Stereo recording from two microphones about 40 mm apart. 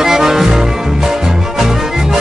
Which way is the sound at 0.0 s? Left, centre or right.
Centre.